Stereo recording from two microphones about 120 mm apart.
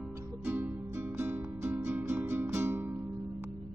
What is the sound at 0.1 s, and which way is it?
Music, 15° right (ahead or behind).